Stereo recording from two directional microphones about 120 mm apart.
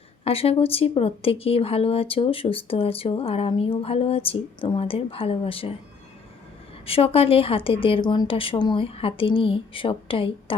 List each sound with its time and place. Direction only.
0.3 s speech: 50° left (ahead or behind)
6.8 s speech: 55° left (ahead or behind)